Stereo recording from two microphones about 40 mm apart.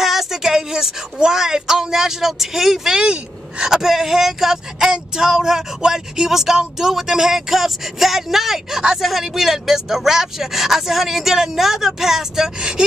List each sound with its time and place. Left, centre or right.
0.0 s speech: centre
3.0 s speech: right
4.9 s speech: centre